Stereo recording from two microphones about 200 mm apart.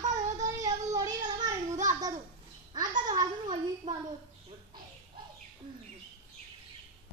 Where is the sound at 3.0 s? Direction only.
20° right (ahead or behind).